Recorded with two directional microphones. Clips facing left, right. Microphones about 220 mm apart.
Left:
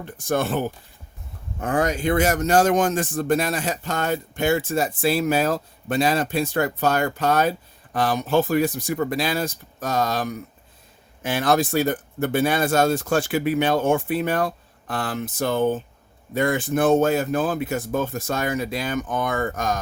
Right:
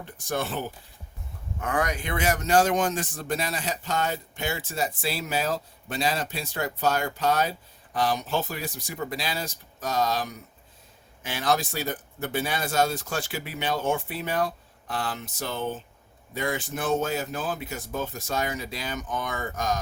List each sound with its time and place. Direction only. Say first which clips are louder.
0.3 s speech: left 7 dB; 50° left (ahead or behind)
1.6 s speech: left 7 dB; 30° left (ahead or behind)
2.1 s speech: left 3 dB; 45° left (ahead or behind)